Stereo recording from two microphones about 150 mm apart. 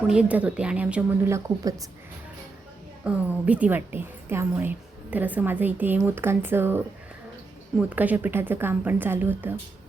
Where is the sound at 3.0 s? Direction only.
10° right (ahead or behind).